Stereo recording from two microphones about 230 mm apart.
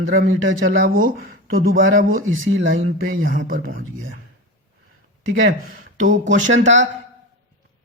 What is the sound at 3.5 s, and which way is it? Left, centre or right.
Speech, right.